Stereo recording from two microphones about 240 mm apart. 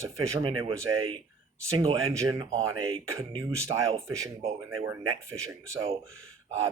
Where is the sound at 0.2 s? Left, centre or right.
Right.